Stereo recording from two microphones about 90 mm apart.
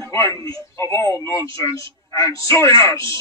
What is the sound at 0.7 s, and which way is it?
A man's voice, 30° left (ahead or behind).